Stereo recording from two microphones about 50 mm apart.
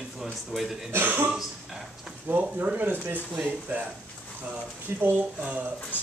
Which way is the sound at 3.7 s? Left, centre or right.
Right.